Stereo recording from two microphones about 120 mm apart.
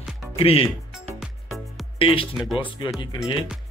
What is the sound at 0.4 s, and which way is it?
Speech, 50° left (ahead or behind).